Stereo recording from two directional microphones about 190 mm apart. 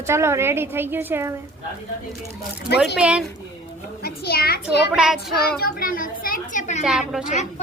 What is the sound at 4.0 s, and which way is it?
Speech, 55° left (ahead or behind).